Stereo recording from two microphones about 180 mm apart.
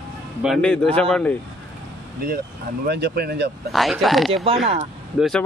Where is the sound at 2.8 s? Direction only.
65° right (ahead or behind).